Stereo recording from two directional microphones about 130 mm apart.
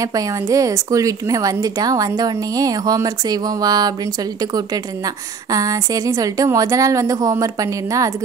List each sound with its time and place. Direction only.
0.0 s a woman's voice: 25° right (ahead or behind)